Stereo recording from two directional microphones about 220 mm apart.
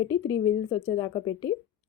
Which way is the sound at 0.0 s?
15° left (ahead or behind).